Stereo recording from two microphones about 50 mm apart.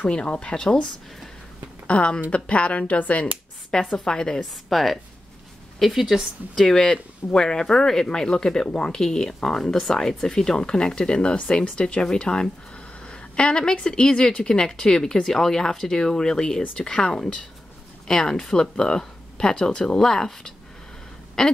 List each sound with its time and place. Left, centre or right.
0.0 s speech: left
1.9 s speech: left
4.0 s a woman's voice: centre
6.6 s speech: centre